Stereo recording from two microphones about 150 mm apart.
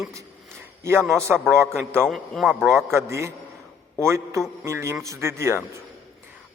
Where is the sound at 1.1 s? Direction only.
15° right (ahead or behind).